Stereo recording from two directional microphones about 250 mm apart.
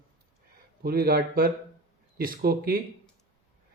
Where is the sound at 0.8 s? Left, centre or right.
Right.